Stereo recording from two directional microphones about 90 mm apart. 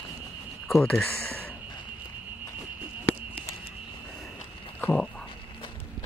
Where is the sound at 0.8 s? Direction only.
15° left (ahead or behind).